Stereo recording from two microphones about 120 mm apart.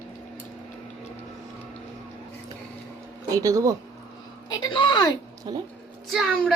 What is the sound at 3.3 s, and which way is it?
Speech, 30° right (ahead or behind).